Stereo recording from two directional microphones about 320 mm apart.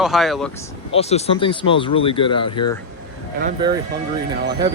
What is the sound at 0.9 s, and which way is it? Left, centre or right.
Speech, centre.